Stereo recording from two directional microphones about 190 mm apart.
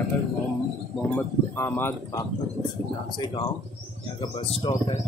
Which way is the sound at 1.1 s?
10° left (ahead or behind).